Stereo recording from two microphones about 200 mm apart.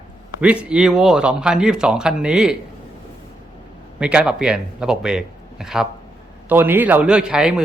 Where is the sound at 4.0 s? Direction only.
5° right (ahead or behind).